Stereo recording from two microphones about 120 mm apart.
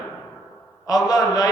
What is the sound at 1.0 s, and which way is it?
Speech, 30° left (ahead or behind).